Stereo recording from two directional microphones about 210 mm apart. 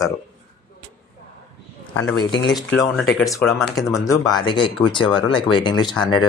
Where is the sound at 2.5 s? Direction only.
Centre (ahead or behind).